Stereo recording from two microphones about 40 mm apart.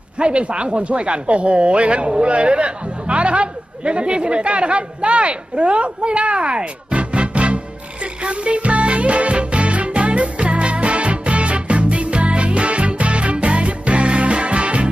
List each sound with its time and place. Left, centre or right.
0.2 s speech: right
8.0 s music: right